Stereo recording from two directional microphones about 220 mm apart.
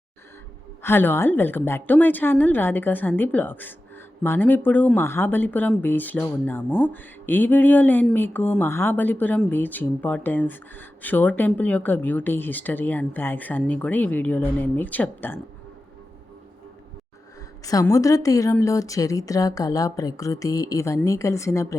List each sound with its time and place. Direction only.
0.8 s speech: 10° left (ahead or behind)
17.7 s speech: 15° left (ahead or behind)